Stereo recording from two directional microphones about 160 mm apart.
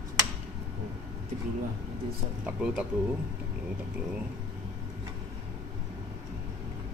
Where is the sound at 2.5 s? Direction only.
5° right (ahead or behind).